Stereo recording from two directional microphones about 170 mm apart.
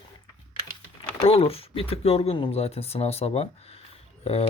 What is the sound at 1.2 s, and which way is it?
Speech, 35° left (ahead or behind).